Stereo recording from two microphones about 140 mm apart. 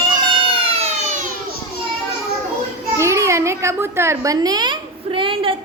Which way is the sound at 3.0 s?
20° right (ahead or behind).